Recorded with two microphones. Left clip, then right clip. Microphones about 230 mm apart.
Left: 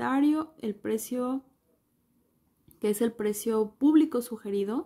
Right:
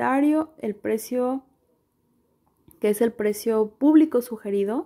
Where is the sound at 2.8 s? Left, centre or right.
Centre.